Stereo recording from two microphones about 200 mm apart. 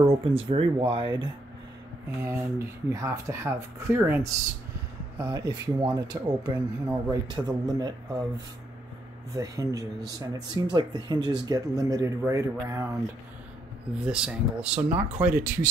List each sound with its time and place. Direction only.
0.0 s speech: 30° right (ahead or behind)
2.1 s speech: 10° right (ahead or behind)
9.3 s speech: 15° right (ahead or behind)
14.0 s speech: 5° right (ahead or behind)